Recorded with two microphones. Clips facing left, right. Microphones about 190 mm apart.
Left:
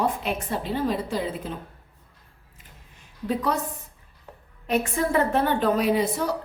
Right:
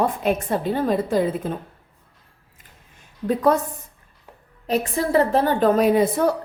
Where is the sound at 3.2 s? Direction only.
50° right (ahead or behind).